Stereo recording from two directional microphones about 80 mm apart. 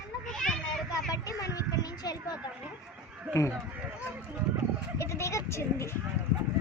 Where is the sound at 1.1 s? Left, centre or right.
Left.